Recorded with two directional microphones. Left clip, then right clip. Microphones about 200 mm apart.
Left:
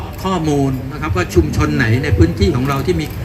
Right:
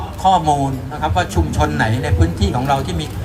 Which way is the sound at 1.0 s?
40° right (ahead or behind).